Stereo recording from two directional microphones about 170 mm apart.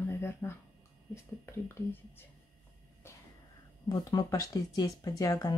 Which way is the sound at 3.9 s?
25° left (ahead or behind).